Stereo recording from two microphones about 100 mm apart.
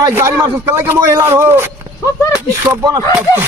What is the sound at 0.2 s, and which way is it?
A man's voice, 25° right (ahead or behind).